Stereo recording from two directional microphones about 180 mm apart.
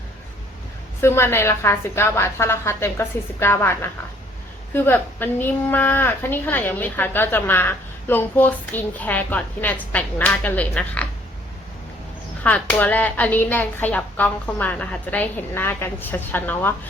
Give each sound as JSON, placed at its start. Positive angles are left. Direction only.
{"t": 1.0, "sound": "a woman's voice", "side_deg": 15}
{"t": 12.4, "sound": "a woman's voice", "side_deg": 10}